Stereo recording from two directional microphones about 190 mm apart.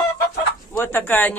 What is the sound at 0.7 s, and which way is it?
Speech, 10° left (ahead or behind).